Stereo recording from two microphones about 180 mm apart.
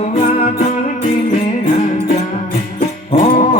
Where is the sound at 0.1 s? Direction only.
45° left (ahead or behind).